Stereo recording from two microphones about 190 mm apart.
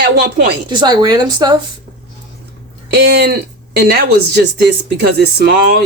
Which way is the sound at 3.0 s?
60° right (ahead or behind).